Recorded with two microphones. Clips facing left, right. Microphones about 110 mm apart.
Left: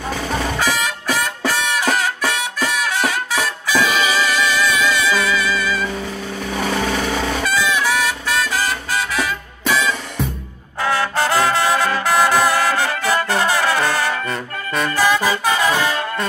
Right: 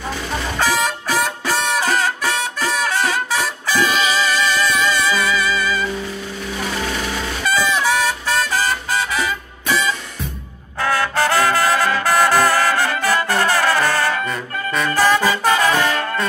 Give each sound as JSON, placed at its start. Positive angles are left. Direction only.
{"t": 0.6, "sound": "music", "side_deg": 0}
{"t": 6.9, "sound": "vehicle", "side_deg": 45}
{"t": 7.4, "sound": "vehicle", "side_deg": 0}
{"t": 7.8, "sound": "music", "side_deg": 0}
{"t": 10.8, "sound": "trumpet", "side_deg": 20}
{"t": 12.0, "sound": "brass instrument", "side_deg": 15}
{"t": 15.0, "sound": "music", "side_deg": 10}